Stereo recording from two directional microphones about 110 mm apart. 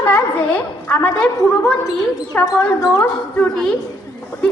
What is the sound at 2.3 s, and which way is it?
Speech, 15° left (ahead or behind).